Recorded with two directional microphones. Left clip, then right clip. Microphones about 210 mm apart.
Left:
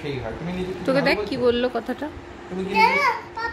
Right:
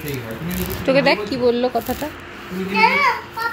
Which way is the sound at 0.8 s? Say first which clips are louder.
Right 5 dB; 15° left (ahead or behind).